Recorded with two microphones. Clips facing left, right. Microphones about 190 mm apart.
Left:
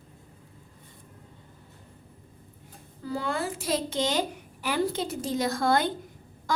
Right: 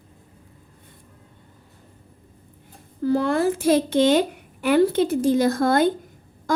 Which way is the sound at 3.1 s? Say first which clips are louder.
Right 9 dB; 70° right (ahead or behind).